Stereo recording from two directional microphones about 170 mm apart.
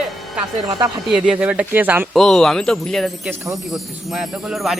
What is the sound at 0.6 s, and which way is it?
Speech, 20° right (ahead or behind).